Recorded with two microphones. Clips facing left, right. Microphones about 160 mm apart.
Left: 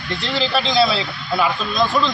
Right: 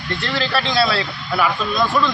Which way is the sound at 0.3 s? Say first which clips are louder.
Left 1 dB; 20° left (ahead or behind).